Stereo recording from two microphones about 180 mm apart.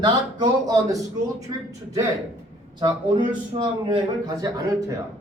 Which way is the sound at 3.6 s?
25° right (ahead or behind).